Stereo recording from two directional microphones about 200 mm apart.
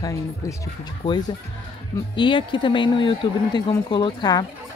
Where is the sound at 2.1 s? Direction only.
25° left (ahead or behind).